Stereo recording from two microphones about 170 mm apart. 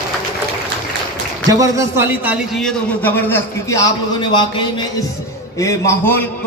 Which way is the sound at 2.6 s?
10° left (ahead or behind).